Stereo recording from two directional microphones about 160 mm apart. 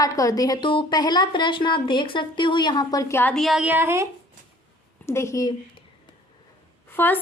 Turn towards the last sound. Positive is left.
turn(degrees=15)  # may be behind; listen again after turning